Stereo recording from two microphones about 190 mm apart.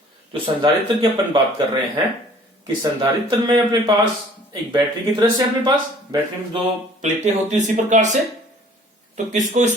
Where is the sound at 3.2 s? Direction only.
25° right (ahead or behind).